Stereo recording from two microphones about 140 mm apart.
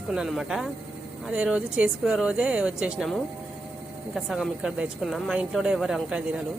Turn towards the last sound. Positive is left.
turn(degrees=-5)  # may be behind; listen again after turning